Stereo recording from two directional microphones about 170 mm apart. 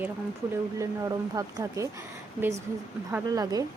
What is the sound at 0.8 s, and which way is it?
Speech, 20° right (ahead or behind).